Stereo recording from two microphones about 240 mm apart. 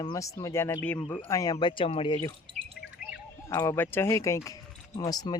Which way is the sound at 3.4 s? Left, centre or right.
Centre.